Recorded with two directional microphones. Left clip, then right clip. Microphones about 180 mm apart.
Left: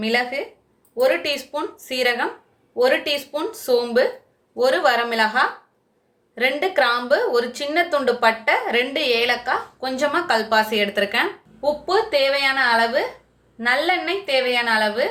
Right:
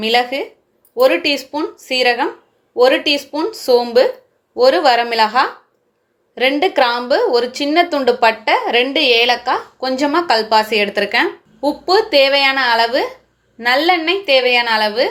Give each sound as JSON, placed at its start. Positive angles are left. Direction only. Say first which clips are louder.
{"t": 0.0, "sound": "a woman's voice", "louder": "right 6 dB", "side_deg": -45}